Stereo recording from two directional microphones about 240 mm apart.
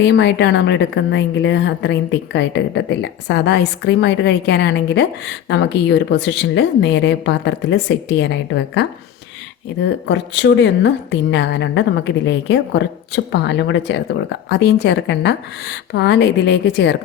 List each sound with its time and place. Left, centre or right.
0.0 s a woman's voice: left